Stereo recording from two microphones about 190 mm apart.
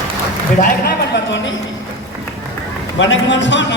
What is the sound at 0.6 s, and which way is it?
Speech, 60° left (ahead or behind).